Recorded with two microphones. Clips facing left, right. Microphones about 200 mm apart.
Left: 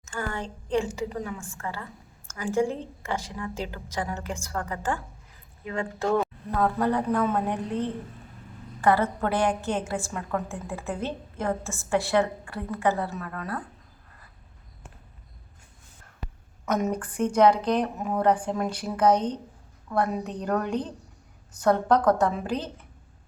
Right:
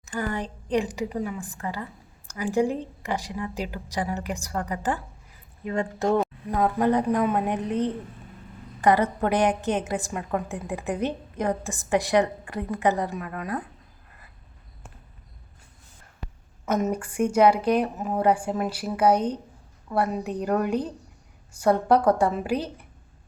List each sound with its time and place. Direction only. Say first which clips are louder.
0.0 s a woman's voice: right 3 dB; 15° right (ahead or behind)
16.6 s a woman's voice: right 1 dB; 5° right (ahead or behind)